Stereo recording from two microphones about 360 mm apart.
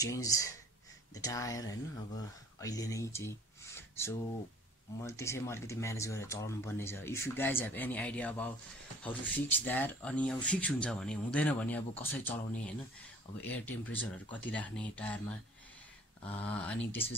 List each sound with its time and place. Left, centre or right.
0.0 s speech: centre
13.4 s speech: centre
16.3 s speech: centre
16.5 s speech: centre